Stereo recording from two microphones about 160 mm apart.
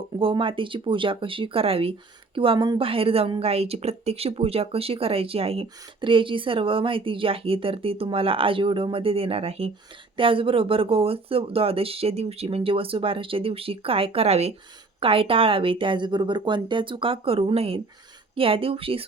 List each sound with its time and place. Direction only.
0.2 s speech: 35° right (ahead or behind)